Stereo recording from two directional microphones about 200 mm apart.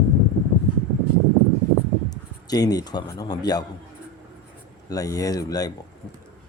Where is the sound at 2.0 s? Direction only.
20° left (ahead or behind).